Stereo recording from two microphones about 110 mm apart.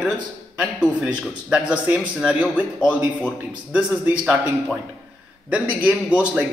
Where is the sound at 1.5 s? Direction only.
10° right (ahead or behind).